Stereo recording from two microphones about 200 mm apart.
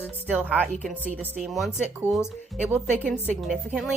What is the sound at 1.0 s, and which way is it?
Speech, 5° right (ahead or behind).